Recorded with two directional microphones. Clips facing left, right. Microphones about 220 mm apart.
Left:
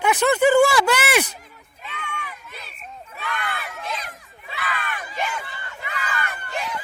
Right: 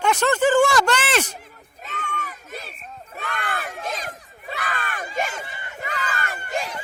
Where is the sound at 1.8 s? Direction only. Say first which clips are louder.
Right 2 dB; 45° right (ahead or behind).